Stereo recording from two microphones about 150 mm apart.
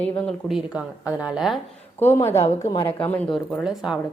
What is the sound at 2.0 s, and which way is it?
A woman's voice, 15° left (ahead or behind).